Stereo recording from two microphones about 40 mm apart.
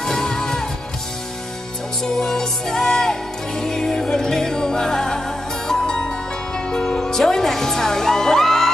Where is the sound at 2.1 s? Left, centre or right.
Centre.